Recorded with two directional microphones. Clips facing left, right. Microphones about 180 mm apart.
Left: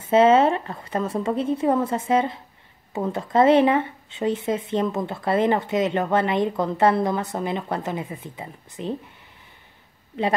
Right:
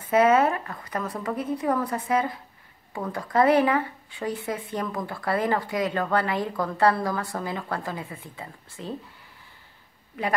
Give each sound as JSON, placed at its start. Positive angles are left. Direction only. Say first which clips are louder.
{"t": 0.0, "sound": "speech", "louder": "left 4 dB", "side_deg": 25}
{"t": 10.1, "sound": "speech", "louder": "left 5 dB", "side_deg": 25}